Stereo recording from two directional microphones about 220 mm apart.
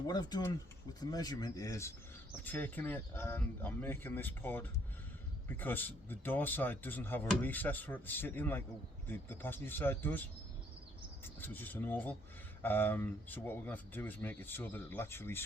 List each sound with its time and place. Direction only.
0.1 s speech: 20° left (ahead or behind)